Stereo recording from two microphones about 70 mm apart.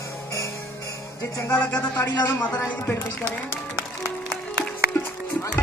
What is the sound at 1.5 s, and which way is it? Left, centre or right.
Speech, centre.